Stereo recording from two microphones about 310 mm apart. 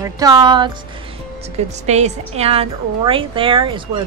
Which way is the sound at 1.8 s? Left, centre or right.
Right.